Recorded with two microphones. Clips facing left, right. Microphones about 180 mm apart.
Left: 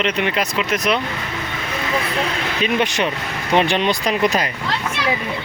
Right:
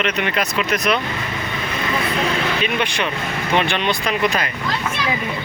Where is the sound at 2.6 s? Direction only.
40° left (ahead or behind).